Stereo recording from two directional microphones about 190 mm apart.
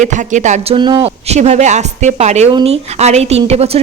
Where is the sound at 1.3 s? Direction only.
35° right (ahead or behind).